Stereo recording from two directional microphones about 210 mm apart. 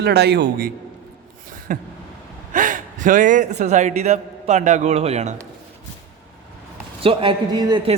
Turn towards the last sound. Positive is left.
turn(degrees=-25)  # may be behind; listen again after turning